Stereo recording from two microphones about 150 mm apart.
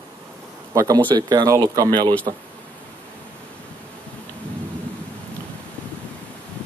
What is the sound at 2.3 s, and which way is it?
Speech, 50° right (ahead or behind).